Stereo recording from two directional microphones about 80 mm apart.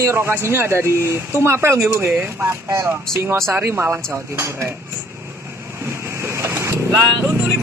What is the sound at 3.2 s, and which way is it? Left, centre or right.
A man's voice, right.